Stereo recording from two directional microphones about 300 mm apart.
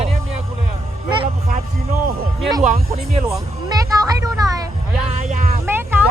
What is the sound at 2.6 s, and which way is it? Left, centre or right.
Speech, right.